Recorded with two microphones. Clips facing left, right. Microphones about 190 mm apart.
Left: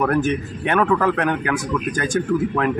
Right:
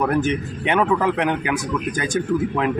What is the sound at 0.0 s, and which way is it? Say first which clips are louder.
Speech: left 1 dB; 20° right (ahead or behind).